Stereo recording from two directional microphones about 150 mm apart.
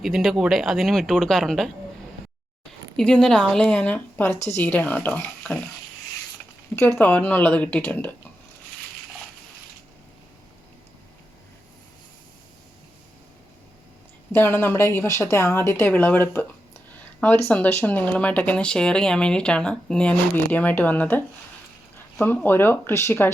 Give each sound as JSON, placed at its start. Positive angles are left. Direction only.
{"t": 0.0, "sound": "speech", "side_deg": 0}
{"t": 2.9, "sound": "speech", "side_deg": 5}
{"t": 6.7, "sound": "speech", "side_deg": 15}
{"t": 14.3, "sound": "speech", "side_deg": 15}